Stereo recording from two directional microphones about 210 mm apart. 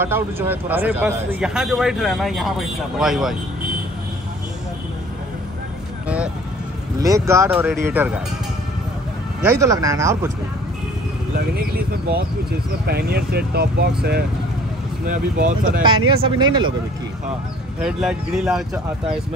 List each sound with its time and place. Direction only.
0.0 s a man's voice: 10° right (ahead or behind)
6.0 s vehicle: 5° right (ahead or behind)
7.0 s speech: 15° right (ahead or behind)
9.4 s speech: 15° right (ahead or behind)
11.3 s speech: 45° right (ahead or behind)
15.0 s speech: 40° right (ahead or behind)
16.3 s speech: 20° right (ahead or behind)
17.7 s a man's voice: 5° right (ahead or behind)